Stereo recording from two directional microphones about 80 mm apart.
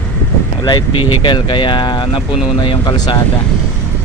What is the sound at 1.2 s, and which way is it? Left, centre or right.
Speech, left.